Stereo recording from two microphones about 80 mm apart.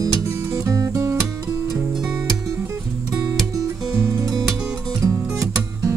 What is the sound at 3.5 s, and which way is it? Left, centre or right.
Music, right.